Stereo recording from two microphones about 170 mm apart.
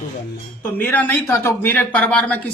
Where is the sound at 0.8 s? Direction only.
10° left (ahead or behind).